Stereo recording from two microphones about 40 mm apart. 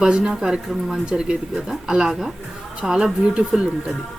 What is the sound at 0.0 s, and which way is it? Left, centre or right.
Speech, centre.